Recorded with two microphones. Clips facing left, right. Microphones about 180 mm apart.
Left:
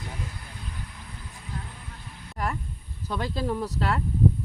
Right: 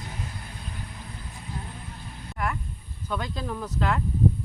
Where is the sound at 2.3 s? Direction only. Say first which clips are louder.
Even; 35° left (ahead or behind).